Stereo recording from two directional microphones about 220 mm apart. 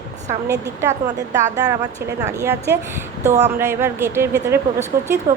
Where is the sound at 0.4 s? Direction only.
10° right (ahead or behind).